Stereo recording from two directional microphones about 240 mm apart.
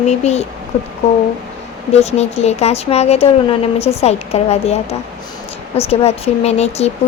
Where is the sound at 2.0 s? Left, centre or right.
Left.